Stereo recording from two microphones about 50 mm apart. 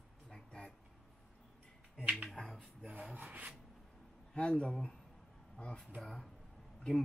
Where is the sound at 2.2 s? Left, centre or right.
Centre.